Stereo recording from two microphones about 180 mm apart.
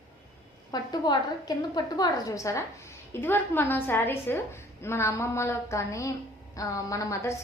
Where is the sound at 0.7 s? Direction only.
20° left (ahead or behind).